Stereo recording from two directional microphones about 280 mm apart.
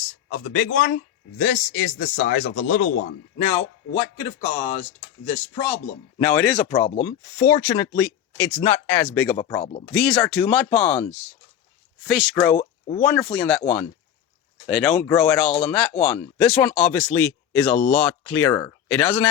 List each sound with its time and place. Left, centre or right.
0.3 s a man's voice: left
3.4 s speech: centre
9.6 s a man's voice: left
9.9 s speech: centre
12.0 s speech: centre
14.7 s speech: centre